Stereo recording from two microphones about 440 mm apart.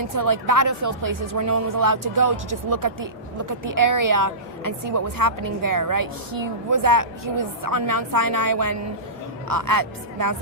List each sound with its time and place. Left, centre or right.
0.2 s a woman's voice: right